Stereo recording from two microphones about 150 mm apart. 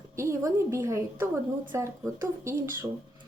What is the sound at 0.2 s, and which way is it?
Speech, 20° right (ahead or behind).